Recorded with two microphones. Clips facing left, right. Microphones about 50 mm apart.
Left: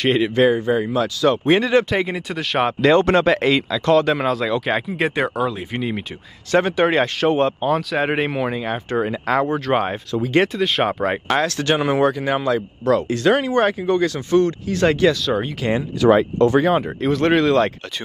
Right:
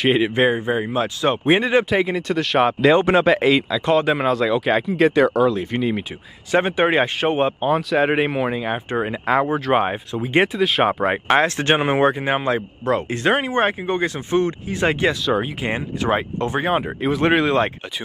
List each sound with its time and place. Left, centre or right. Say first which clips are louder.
0.0 s speech: even; centre
0.3 s speech: left 2 dB; right; by 4.9 s centre
4.9 s speech: right 5 dB; centre
6.6 s speech: right 1 dB; centre
7.9 s speech: right 2 dB; centre
10.1 s speech: left 1 dB; right
10.5 s speech: right 1 dB; centre
11.2 s speech: right 3 dB; right
15.2 s speech: right 1 dB; centre
15.6 s speech: left 6 dB; right
16.8 s speech: left 1 dB; centre